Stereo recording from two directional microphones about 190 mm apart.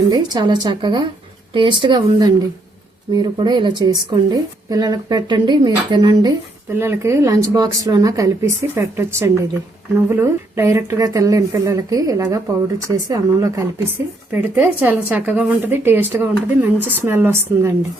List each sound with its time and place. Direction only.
0.1 s a woman's voice: 20° right (ahead or behind)